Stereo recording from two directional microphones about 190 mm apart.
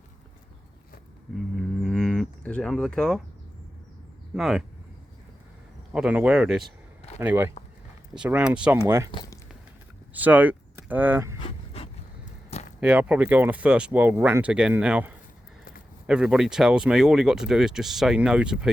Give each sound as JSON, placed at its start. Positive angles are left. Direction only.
{"t": 1.5, "sound": "livestock", "side_deg": 0}
{"t": 4.4, "sound": "speech", "side_deg": 0}
{"t": 5.9, "sound": "speech", "side_deg": -5}
{"t": 9.1, "sound": "speech", "side_deg": 25}
{"t": 10.2, "sound": "speech", "side_deg": -10}
{"t": 11.3, "sound": "pant", "side_deg": 30}
{"t": 12.8, "sound": "speech", "side_deg": -5}